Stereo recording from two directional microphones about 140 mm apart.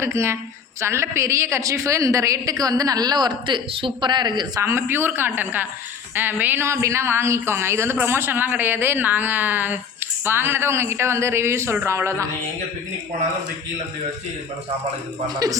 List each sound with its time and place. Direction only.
0.0 s a woman's voice: 20° right (ahead or behind)
4.6 s a woman's voice: 15° right (ahead or behind)